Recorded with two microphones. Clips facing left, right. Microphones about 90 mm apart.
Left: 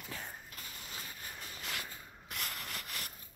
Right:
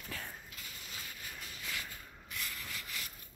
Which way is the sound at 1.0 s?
30° left (ahead or behind).